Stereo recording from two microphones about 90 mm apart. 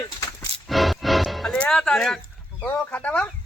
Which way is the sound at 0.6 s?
Centre (ahead or behind).